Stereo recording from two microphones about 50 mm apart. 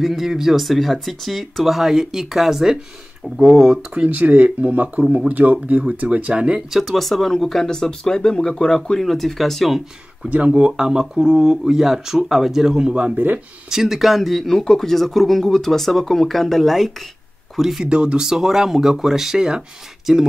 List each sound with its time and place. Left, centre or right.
0.0 s a man's voice: centre
3.9 s speech: right
6.7 s speech: centre
10.3 s speech: right
12.9 s speech: right
13.7 s a man's voice: centre
17.8 s speech: centre